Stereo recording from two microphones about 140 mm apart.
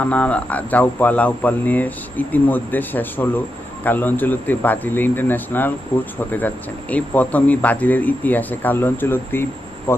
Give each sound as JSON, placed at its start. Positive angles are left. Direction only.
{"t": 0.0, "sound": "speech", "side_deg": 10}
{"t": 6.9, "sound": "speech", "side_deg": 10}